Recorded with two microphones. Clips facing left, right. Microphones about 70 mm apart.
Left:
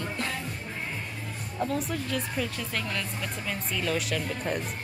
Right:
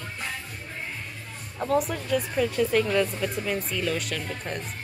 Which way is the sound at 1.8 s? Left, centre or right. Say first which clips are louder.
Right 4 dB; centre.